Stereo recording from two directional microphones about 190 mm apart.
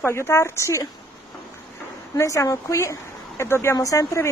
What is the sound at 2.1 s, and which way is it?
Speech, 15° left (ahead or behind).